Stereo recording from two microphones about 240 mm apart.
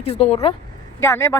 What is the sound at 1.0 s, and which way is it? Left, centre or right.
Speech, centre.